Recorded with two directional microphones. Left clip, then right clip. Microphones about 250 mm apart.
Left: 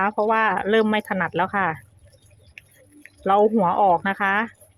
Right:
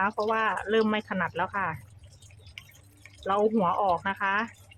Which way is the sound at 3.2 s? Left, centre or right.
Left.